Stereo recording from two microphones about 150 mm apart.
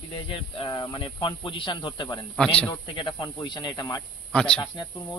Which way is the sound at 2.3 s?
5° left (ahead or behind).